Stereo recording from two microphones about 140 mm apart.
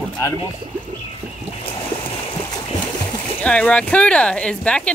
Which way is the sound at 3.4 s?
10° left (ahead or behind).